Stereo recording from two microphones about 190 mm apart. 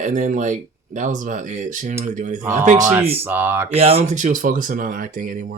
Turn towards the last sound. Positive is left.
turn(degrees=-45)  # may be behind; listen again after turning